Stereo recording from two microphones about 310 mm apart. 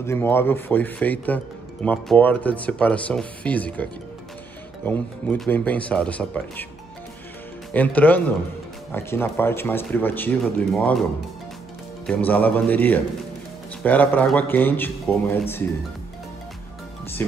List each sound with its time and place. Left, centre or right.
0.0 s speech: centre
4.8 s speech: centre
7.7 s speech: centre
12.1 s speech: centre